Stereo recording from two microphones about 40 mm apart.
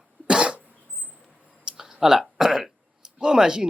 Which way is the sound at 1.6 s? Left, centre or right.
Centre.